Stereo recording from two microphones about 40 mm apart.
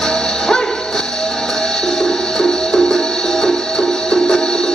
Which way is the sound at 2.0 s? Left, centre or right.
Centre.